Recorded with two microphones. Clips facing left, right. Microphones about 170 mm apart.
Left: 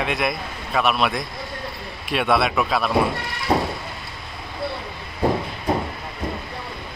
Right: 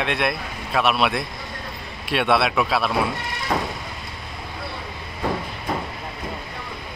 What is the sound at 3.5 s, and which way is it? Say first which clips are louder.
Vehicle: left 4 dB; 30° left (ahead or behind).